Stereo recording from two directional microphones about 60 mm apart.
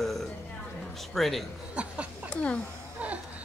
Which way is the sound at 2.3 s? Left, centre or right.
Centre.